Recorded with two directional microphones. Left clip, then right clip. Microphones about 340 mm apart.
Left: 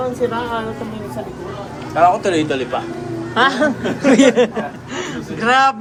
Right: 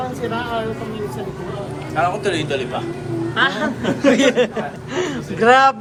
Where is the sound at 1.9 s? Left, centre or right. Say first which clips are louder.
Left 6 dB; centre.